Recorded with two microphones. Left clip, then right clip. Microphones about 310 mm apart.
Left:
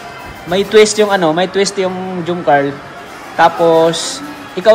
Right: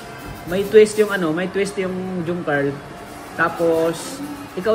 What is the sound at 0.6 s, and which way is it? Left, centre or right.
Speech, centre.